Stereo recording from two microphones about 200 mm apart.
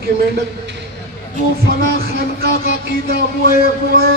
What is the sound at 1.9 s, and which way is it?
A man's voice, 50° right (ahead or behind).